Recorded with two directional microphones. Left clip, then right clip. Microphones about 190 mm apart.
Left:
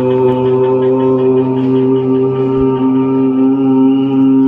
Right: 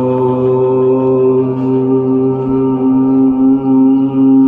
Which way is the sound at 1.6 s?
35° left (ahead or behind).